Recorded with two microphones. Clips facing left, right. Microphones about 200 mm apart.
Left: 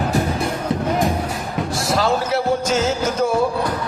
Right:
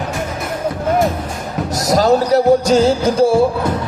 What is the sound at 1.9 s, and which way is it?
Music, 40° right (ahead or behind).